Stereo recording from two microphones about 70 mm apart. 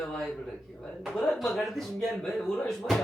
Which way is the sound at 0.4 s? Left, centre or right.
Centre.